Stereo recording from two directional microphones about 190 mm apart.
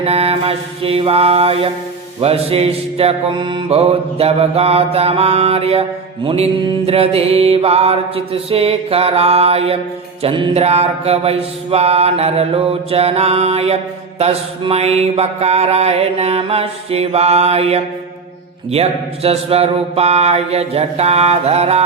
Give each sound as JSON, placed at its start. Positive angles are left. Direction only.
{"t": 0.0, "sound": "mantra", "side_deg": -30}